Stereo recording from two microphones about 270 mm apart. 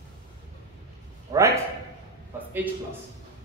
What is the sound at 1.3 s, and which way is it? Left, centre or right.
Speech, centre.